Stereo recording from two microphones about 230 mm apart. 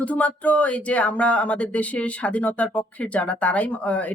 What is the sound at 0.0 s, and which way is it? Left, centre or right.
A woman's voice, centre.